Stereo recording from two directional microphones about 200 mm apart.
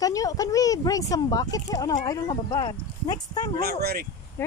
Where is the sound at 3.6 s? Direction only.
55° right (ahead or behind).